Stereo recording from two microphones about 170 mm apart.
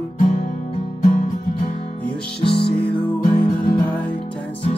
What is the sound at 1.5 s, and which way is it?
Music, 30° left (ahead or behind).